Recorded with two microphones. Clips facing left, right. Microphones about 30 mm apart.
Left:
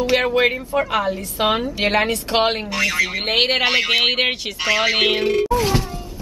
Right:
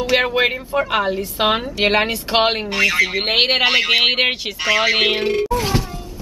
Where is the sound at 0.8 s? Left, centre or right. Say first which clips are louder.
Right 2 dB; right; by 5.2 s centre.